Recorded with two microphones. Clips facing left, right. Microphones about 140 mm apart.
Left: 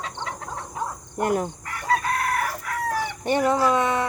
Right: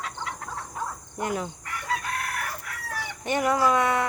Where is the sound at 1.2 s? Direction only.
50° left (ahead or behind).